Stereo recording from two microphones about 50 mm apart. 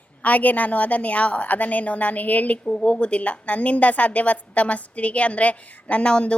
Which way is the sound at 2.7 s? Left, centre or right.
Centre.